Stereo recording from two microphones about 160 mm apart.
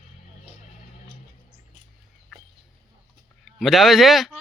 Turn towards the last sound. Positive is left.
turn(degrees=0)  # may be behind; listen again after turning